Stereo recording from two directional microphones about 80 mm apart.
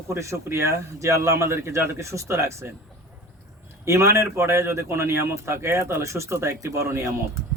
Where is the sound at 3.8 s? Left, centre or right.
Right.